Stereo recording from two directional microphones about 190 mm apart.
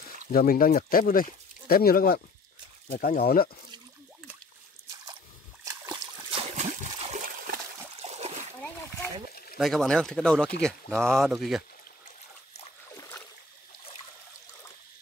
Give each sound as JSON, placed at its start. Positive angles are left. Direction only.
{"t": 0.3, "sound": "speech", "side_deg": 50}
{"t": 5.7, "sound": "splash", "side_deg": -20}
{"t": 6.4, "sound": "a sound", "side_deg": -35}
{"t": 8.0, "sound": "splash", "side_deg": -35}
{"t": 8.6, "sound": "a sound", "side_deg": 10}
{"t": 9.6, "sound": "speech", "side_deg": 0}